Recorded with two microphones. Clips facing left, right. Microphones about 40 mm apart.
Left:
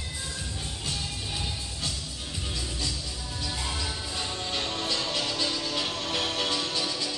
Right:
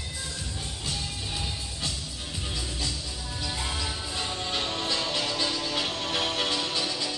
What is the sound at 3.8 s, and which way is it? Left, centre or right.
Music, centre.